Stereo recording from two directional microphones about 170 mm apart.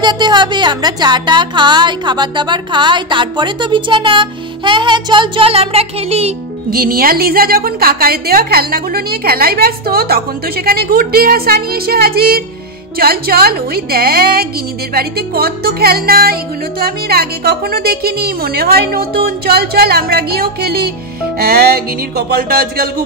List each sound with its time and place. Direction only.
0.0 s a woman's voice: 25° right (ahead or behind)
6.7 s a woman's voice: 60° right (ahead or behind)